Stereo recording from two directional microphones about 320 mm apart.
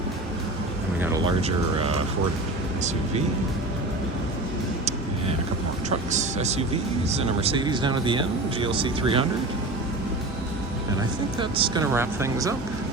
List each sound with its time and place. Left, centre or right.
1.4 s speech: centre
6.1 s speech: right
11.3 s speech: centre